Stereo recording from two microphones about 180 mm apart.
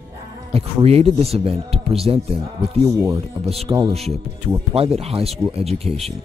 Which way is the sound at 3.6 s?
30° right (ahead or behind).